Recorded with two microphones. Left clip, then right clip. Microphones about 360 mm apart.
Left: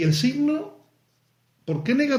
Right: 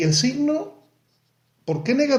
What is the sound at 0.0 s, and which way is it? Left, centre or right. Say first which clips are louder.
Speech: right 2 dB; centre.